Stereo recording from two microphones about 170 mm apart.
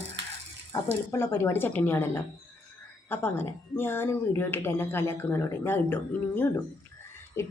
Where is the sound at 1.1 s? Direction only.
15° left (ahead or behind).